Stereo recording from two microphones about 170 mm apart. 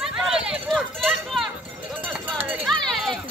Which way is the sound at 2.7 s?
Centre (ahead or behind).